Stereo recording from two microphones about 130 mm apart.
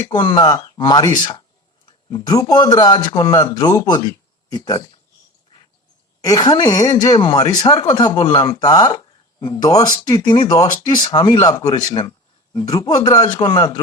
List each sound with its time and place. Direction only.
0.2 s a man's voice: 35° left (ahead or behind)
6.2 s a man's voice: 30° left (ahead or behind)